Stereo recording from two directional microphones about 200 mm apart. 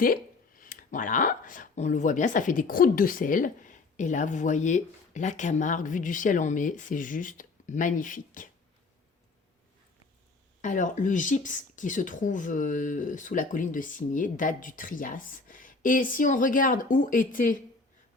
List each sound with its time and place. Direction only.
0.0 s speech: 45° left (ahead or behind)
10.6 s speech: 40° left (ahead or behind)